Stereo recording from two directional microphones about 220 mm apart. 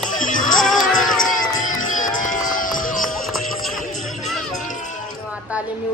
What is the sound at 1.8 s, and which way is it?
Music, 35° left (ahead or behind).